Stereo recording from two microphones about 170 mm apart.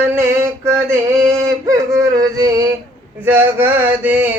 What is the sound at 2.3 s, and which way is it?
Male singing, 20° right (ahead or behind).